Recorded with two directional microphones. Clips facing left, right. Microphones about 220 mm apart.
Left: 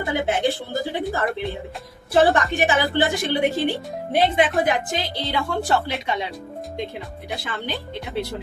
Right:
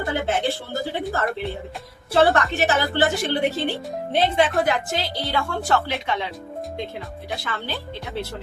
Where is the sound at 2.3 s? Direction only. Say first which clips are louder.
Left 1 dB; 15° left (ahead or behind).